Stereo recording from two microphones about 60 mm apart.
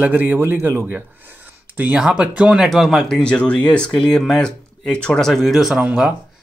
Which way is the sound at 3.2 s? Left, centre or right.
Centre.